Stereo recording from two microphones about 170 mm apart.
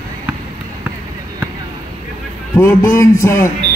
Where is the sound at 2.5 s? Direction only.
20° left (ahead or behind).